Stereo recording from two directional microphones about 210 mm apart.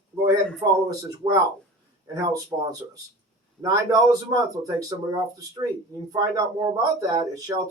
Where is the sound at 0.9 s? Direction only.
15° right (ahead or behind).